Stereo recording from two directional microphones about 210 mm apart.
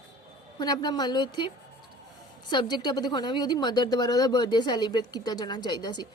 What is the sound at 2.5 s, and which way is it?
A woman's voice, 20° left (ahead or behind).